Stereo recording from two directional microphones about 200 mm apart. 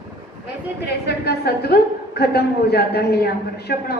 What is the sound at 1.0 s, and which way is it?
A woman's voice, 55° left (ahead or behind).